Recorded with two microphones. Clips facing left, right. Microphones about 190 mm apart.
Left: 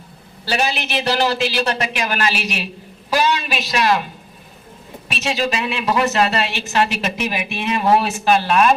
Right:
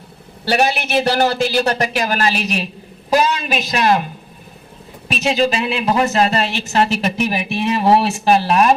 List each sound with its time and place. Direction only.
0.4 s a man's voice: 55° right (ahead or behind); by 4.0 s 40° right (ahead or behind)
5.1 s a woman's voice: 30° right (ahead or behind)